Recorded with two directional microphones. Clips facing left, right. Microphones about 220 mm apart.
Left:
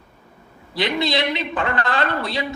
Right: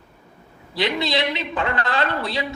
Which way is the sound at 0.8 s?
50° left (ahead or behind).